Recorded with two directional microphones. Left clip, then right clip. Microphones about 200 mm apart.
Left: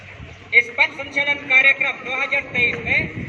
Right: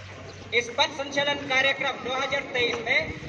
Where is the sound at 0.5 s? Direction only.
20° left (ahead or behind).